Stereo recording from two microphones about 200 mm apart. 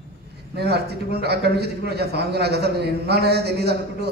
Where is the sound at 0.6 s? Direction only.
55° right (ahead or behind).